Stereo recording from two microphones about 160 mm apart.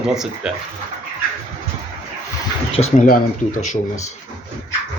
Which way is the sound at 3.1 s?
60° left (ahead or behind).